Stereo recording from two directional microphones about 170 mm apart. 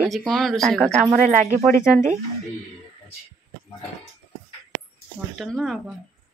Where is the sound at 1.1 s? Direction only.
45° right (ahead or behind).